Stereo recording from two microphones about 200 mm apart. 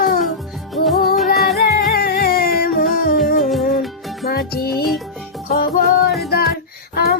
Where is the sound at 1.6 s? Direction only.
50° left (ahead or behind).